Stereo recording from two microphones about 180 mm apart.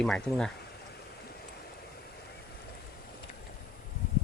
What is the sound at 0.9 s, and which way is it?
Stream, 60° left (ahead or behind).